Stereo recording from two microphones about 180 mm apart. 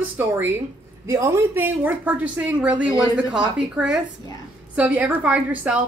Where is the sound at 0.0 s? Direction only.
10° right (ahead or behind).